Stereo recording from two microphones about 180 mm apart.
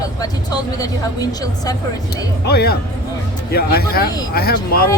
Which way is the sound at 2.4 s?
60° left (ahead or behind).